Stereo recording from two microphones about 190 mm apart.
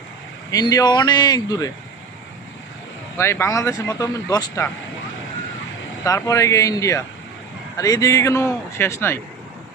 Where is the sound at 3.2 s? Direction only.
15° left (ahead or behind).